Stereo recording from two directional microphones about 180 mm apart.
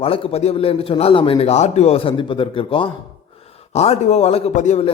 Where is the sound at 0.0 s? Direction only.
30° left (ahead or behind).